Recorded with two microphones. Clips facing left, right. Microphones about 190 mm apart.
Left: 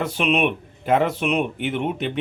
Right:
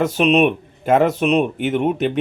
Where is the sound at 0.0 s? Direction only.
40° right (ahead or behind).